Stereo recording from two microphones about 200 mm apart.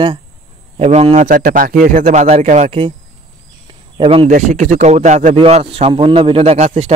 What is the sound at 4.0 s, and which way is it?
Speech, 25° right (ahead or behind).